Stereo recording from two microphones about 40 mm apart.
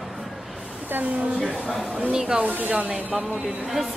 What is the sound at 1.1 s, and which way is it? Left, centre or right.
Speech, right.